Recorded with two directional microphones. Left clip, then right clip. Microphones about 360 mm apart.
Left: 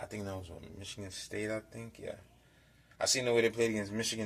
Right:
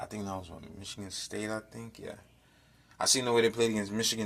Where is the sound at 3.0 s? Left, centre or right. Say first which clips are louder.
Right 3 dB; centre.